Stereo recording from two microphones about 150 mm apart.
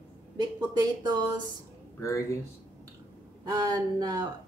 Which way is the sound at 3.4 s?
25° right (ahead or behind).